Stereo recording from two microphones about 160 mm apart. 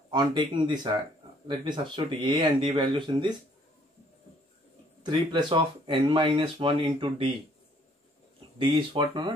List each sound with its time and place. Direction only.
0.1 s speech: 25° right (ahead or behind)
5.0 s speech: 30° right (ahead or behind)
8.5 s speech: 30° right (ahead or behind)